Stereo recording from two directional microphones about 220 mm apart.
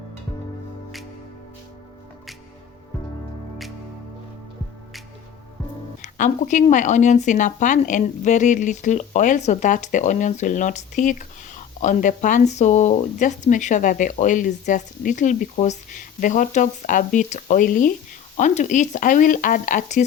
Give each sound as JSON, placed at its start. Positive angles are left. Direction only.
{"t": 6.0, "sound": "speech", "side_deg": 35}